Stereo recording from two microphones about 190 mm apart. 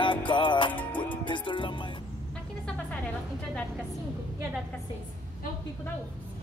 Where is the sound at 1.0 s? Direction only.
25° left (ahead or behind).